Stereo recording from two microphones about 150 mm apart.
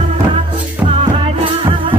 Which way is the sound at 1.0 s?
40° right (ahead or behind).